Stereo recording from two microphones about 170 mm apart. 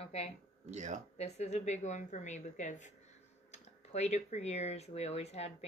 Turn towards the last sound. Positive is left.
turn(degrees=40)  # may be behind; listen again after turning